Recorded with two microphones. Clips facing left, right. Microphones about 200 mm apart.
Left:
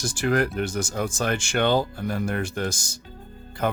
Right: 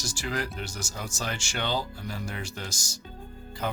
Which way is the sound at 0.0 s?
55° left (ahead or behind).